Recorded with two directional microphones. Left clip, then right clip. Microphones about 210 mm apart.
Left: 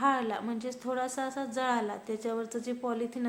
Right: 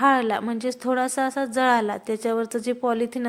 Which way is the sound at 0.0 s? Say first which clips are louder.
Right 9 dB; 40° right (ahead or behind).